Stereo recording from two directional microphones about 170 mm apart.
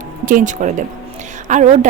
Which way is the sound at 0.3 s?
50° right (ahead or behind).